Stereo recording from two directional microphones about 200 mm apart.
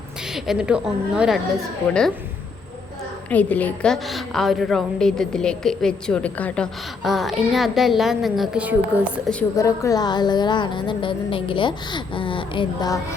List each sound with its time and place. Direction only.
0.3 s a woman's voice: centre (ahead or behind)
3.2 s a woman's voice: 10° left (ahead or behind)
9.6 s a woman's voice: 15° left (ahead or behind)